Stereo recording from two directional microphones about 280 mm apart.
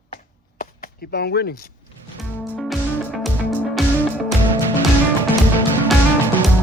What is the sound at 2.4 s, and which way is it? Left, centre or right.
Music, centre.